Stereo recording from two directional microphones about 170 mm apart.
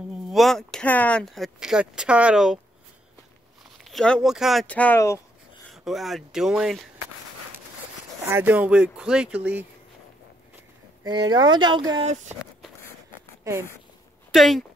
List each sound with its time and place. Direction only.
0.3 s speech: centre (ahead or behind)
3.8 s speech: 5° left (ahead or behind)
5.7 s speech: centre (ahead or behind)
8.3 s speech: 10° right (ahead or behind)
11.1 s speech: 25° right (ahead or behind)
12.1 s speech: 45° right (ahead or behind)
13.4 s a sound: 15° right (ahead or behind)
14.3 s speech: centre (ahead or behind)